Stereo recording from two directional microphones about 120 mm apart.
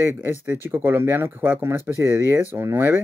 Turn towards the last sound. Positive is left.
turn(degrees=-20)  # may be behind; listen again after turning